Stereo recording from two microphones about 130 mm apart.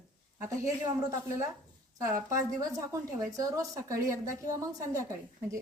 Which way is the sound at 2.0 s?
25° right (ahead or behind).